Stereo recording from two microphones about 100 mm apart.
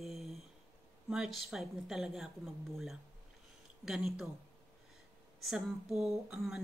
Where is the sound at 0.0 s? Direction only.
Centre (ahead or behind).